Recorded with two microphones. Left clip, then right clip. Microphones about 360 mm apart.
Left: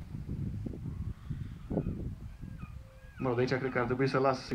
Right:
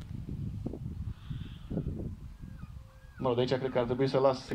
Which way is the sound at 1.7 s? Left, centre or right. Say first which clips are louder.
Left 4 dB; left.